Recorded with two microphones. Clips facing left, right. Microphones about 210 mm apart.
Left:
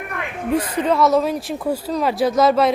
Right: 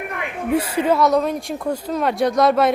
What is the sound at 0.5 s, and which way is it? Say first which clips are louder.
Speech: right 1 dB; 10° right (ahead or behind).